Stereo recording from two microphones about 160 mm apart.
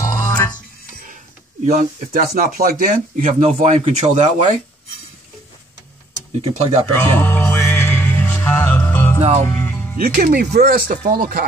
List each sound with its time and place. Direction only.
0.0 s music: 20° left (ahead or behind)
1.7 s speech: 60° right (ahead or behind)
3.4 s speech: 45° right (ahead or behind)
6.4 s speech: 40° right (ahead or behind)
6.9 s music: 15° left (ahead or behind)
9.2 s speech: 40° right (ahead or behind)
9.5 s music: 10° left (ahead or behind)
9.9 s speech: 60° right (ahead or behind)
10.5 s speech: 70° right (ahead or behind)